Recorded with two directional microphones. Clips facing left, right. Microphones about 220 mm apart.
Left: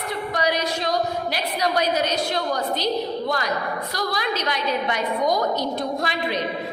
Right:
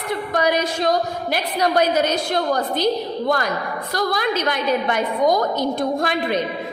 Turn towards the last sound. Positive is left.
turn(degrees=-50)  # may be behind; listen again after turning